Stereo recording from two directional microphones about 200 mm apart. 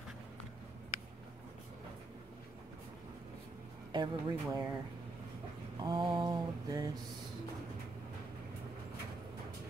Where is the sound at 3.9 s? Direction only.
20° right (ahead or behind).